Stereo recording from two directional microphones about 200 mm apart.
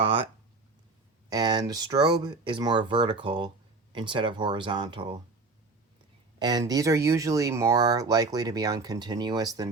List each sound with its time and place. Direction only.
0.0 s speech: 25° right (ahead or behind)
1.3 s speech: 20° right (ahead or behind)
6.4 s speech: 20° right (ahead or behind)